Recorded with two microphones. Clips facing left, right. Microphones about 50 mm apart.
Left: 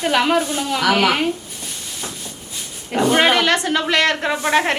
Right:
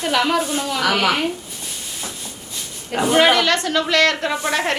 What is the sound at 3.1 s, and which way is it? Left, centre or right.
A woman's voice, left.